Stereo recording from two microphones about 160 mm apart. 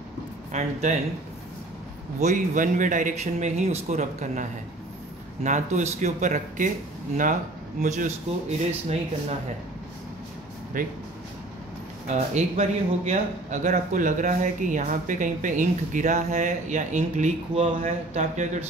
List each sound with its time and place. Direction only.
0.5 s a man's voice: 45° right (ahead or behind)
2.1 s a man's voice: 50° right (ahead or behind)
7.8 s a man's voice: 50° right (ahead or behind)
10.8 s speech: 60° right (ahead or behind)
12.1 s a man's voice: 45° right (ahead or behind)